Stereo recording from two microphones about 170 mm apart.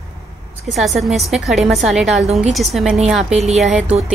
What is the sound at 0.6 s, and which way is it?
A woman's voice, centre (ahead or behind).